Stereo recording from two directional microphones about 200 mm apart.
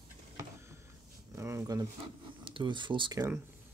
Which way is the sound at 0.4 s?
15° right (ahead or behind).